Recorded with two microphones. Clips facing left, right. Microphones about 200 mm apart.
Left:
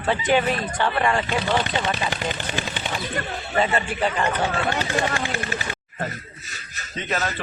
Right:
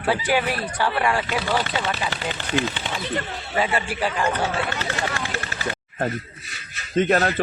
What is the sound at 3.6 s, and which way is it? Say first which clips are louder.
Speech: left 1 dB; 5° right (ahead or behind).